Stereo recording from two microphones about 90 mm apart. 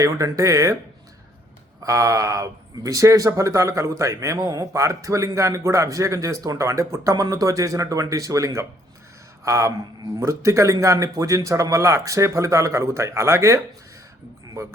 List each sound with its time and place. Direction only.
0.0 s speech: 40° right (ahead or behind)
1.8 s speech: 35° right (ahead or behind)